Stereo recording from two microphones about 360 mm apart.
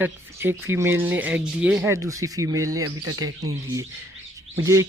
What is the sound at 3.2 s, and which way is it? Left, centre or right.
Speech, right.